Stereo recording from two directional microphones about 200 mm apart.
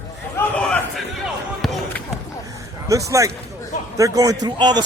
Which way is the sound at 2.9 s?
15° right (ahead or behind).